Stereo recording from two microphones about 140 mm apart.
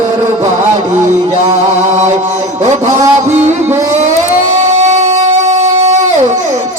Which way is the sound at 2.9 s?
20° right (ahead or behind).